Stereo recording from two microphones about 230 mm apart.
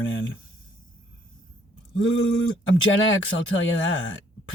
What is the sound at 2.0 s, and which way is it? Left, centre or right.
Speech, left.